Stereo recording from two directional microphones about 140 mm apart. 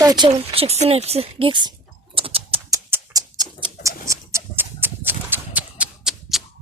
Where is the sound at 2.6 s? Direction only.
25° right (ahead or behind).